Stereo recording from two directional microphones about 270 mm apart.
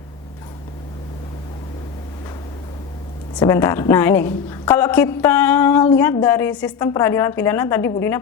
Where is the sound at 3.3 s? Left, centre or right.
Centre.